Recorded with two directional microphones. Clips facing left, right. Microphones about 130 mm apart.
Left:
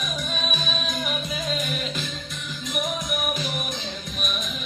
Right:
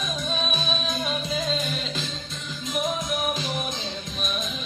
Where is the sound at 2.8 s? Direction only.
25° right (ahead or behind).